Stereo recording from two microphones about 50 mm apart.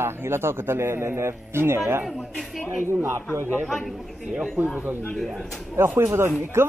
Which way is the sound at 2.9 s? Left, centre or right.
Right.